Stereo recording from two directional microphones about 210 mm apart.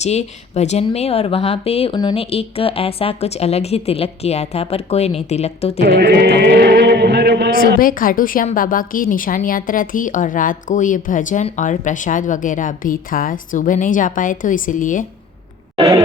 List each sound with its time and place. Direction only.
0.0 s speech: 30° left (ahead or behind)
5.8 s chant: 50° right (ahead or behind)
7.8 s a woman's voice: 40° left (ahead or behind)
15.7 s a sound: 20° right (ahead or behind)